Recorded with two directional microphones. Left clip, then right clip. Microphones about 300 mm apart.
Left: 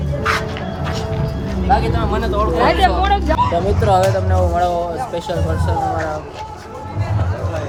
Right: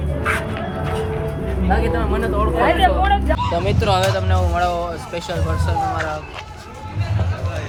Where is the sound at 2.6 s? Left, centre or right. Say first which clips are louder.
Left 1 dB; left.